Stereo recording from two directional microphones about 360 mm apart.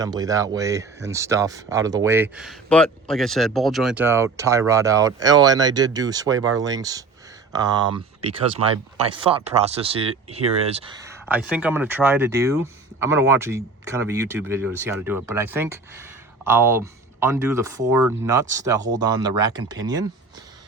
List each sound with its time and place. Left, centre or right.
0.0 s speech: centre